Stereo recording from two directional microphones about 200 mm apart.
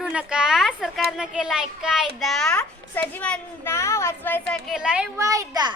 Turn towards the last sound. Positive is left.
turn(degrees=-20)  # may be behind; listen again after turning